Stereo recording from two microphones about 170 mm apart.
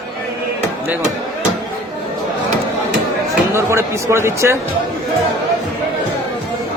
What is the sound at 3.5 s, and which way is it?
A man's voice, 15° right (ahead or behind).